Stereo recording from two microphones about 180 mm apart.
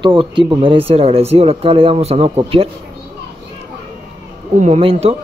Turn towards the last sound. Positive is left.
turn(degrees=-35)  # may be behind; listen again after turning